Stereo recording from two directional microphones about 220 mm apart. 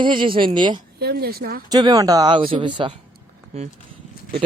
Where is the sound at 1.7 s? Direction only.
15° right (ahead or behind).